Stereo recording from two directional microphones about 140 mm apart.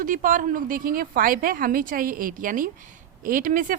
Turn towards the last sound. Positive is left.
turn(degrees=-75)  # may be behind; listen again after turning